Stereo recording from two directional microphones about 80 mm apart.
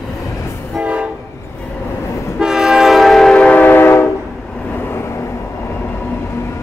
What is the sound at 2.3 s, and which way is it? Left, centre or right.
Train, centre.